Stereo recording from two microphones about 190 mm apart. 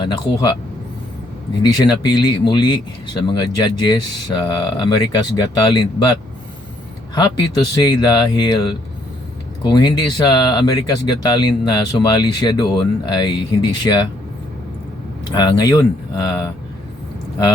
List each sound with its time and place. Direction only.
0.0 s speech: 25° left (ahead or behind)
1.8 s speech: 25° left (ahead or behind)
7.2 s speech: 20° left (ahead or behind)
15.3 s speech: 20° left (ahead or behind)